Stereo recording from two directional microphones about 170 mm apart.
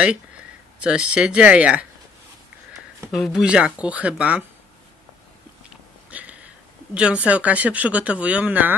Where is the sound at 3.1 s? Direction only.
Centre (ahead or behind).